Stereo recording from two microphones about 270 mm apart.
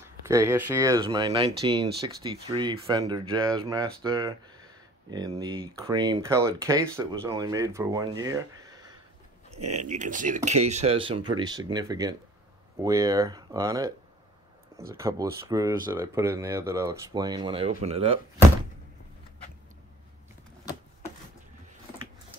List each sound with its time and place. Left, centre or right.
0.3 s speech: centre
9.6 s speech: right
9.8 s speech: right
15.0 s speech: centre